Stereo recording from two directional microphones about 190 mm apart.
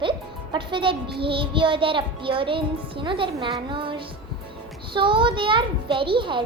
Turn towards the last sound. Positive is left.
turn(degrees=-25)  # may be behind; listen again after turning